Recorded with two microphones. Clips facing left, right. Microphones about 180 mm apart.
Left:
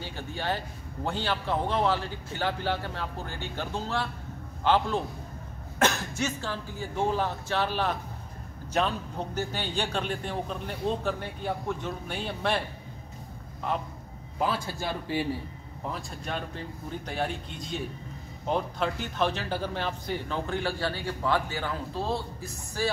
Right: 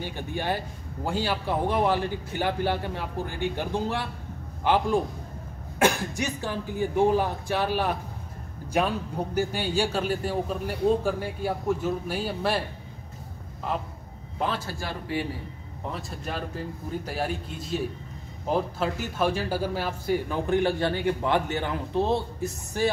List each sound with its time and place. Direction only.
0.0 s speech: 15° right (ahead or behind)
14.7 s speech: 25° left (ahead or behind)
15.9 s a man's voice: centre (ahead or behind); by 22.8 s 20° right (ahead or behind)